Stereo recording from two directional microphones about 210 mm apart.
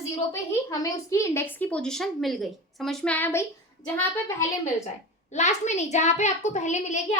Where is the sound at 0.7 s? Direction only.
15° left (ahead or behind).